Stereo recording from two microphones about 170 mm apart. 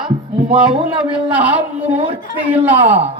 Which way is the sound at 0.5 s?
5° right (ahead or behind).